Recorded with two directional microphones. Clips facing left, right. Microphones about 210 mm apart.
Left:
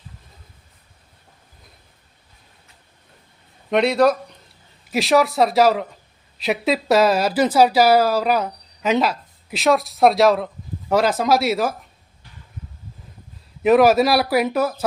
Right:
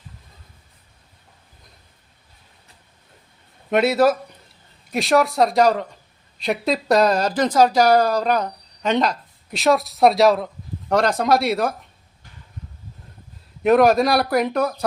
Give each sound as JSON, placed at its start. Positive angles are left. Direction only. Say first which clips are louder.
{"t": 3.7, "sound": "a woman's voice", "louder": "even", "side_deg": -5}
{"t": 13.6, "sound": "a woman's voice", "louder": "left 1 dB", "side_deg": 0}